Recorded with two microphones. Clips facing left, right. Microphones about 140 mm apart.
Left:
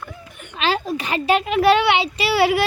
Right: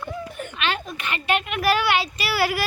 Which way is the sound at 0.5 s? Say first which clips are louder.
Left 7 dB; 35° left (ahead or behind).